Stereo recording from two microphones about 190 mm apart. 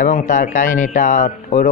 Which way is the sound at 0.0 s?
45° left (ahead or behind).